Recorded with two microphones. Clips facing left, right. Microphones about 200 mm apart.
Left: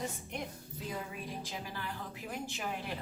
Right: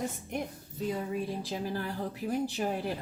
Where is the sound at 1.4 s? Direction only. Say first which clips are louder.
Right 8 dB; 40° right (ahead or behind).